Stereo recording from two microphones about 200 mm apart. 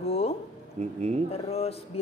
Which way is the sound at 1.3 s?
30° left (ahead or behind).